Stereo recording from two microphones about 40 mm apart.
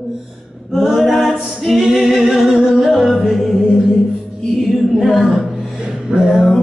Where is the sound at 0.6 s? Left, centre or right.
Centre.